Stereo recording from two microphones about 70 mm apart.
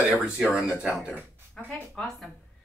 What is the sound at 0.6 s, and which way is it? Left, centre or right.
Speech, centre.